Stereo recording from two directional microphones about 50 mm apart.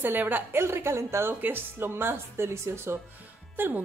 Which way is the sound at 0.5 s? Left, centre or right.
Right.